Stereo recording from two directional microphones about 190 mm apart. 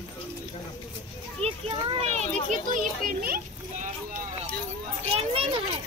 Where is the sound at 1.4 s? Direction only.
30° right (ahead or behind).